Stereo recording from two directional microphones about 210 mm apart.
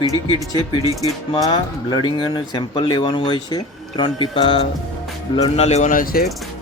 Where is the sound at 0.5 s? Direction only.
15° left (ahead or behind).